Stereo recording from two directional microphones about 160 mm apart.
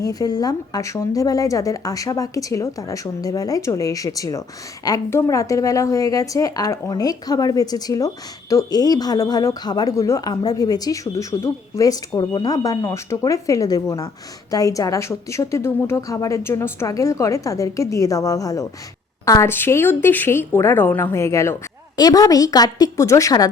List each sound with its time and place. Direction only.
0.0 s a woman's voice: 25° left (ahead or behind)